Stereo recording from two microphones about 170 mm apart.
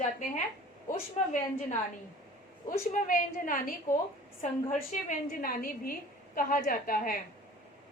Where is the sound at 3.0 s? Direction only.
50° left (ahead or behind).